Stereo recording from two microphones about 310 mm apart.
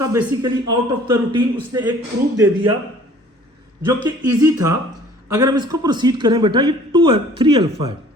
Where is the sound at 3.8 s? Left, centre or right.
Centre.